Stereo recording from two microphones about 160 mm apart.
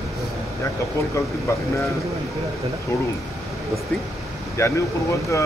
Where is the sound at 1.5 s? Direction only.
15° left (ahead or behind).